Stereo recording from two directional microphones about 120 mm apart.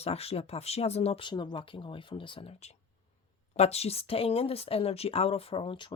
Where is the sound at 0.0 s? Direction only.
55° left (ahead or behind).